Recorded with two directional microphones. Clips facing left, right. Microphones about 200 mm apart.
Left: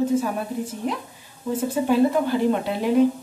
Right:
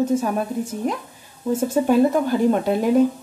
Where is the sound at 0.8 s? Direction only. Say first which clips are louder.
Right 2 dB; 45° right (ahead or behind).